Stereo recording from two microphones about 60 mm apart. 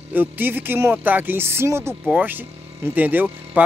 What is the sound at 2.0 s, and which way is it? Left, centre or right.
Speech, right.